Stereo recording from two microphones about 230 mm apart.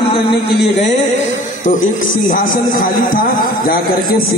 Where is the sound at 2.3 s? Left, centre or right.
Left.